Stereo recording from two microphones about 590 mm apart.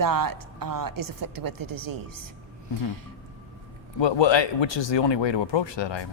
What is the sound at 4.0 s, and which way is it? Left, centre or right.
Speech, left.